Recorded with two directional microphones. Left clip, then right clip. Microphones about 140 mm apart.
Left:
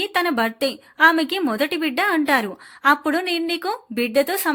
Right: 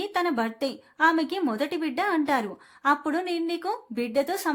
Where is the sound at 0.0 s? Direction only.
15° left (ahead or behind).